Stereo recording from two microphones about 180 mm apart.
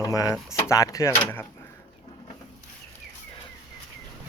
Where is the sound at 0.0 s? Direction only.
20° left (ahead or behind).